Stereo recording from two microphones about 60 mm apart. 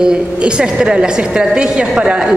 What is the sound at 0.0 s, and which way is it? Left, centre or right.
A woman's voice, centre.